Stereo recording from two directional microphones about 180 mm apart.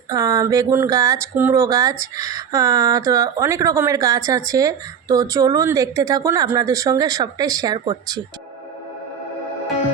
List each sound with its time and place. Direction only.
0.1 s speech: 20° right (ahead or behind)